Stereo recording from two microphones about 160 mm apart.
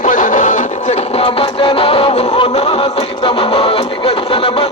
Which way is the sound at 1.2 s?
35° left (ahead or behind).